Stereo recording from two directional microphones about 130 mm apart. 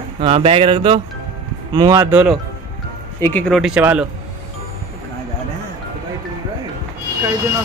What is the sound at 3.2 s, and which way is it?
Speech, 10° left (ahead or behind).